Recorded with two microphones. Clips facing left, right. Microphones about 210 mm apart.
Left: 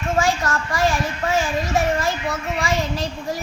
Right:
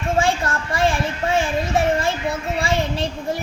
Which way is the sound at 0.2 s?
30° right (ahead or behind).